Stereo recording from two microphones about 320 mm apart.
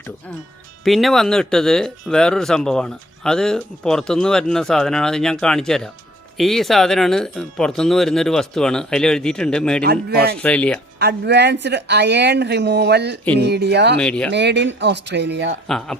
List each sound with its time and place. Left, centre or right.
0.9 s speech: centre
9.8 s a man's voice: right
10.3 s speech: centre
11.0 s speech: right
14.0 s speech: centre
14.3 s speech: right
15.6 s speech: centre